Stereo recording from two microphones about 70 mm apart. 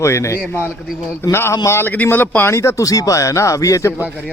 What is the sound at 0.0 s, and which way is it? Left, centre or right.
A man's voice, left.